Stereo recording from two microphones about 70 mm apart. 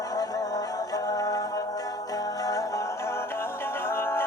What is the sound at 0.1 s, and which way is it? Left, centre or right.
Music, left.